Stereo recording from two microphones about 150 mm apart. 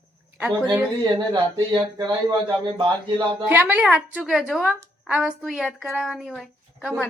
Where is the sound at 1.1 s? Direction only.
30° right (ahead or behind).